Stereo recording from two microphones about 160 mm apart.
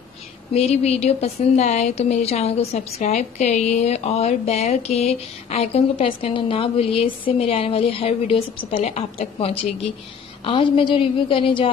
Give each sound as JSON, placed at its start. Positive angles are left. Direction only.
{"t": 0.6, "sound": "a woman's voice", "side_deg": 40}